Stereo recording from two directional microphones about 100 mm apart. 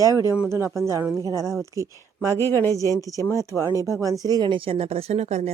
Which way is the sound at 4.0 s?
35° right (ahead or behind).